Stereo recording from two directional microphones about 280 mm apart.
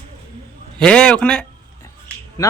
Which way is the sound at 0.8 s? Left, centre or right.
Centre.